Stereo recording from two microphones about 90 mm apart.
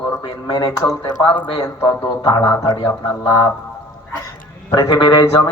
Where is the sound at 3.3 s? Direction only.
40° left (ahead or behind).